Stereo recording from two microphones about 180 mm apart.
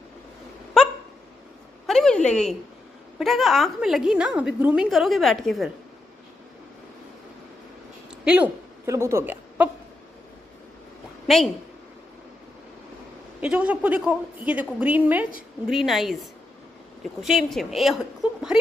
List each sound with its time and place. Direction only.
1.9 s a sound: 5° left (ahead or behind)
3.2 s a woman's voice: centre (ahead or behind)
8.3 s a woman's voice: 10° right (ahead or behind)
11.2 s a woman's voice: centre (ahead or behind)
13.4 s a woman's voice: 5° right (ahead or behind)